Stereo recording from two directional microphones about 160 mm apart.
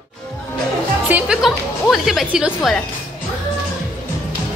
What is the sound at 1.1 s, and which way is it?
A woman's voice, 5° right (ahead or behind).